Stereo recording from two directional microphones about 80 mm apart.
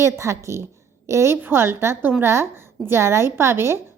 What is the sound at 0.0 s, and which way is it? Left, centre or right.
A woman's voice, right.